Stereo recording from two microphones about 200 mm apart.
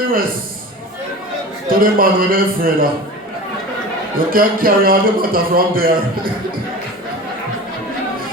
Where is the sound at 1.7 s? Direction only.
45° right (ahead or behind).